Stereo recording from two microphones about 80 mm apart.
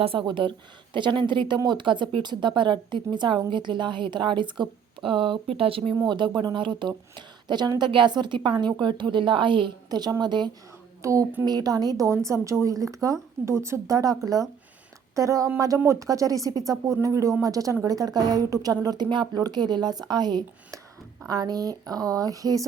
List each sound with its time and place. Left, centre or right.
0.2 s a woman's voice: right
7.8 s a woman's voice: right
11.0 s speech: right
11.4 s a woman's voice: right